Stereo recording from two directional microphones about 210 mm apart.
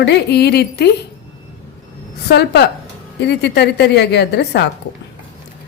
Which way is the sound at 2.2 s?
50° left (ahead or behind).